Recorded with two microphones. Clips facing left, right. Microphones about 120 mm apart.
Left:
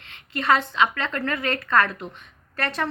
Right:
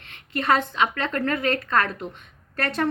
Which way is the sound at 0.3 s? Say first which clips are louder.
Left 1 dB; 50° right (ahead or behind).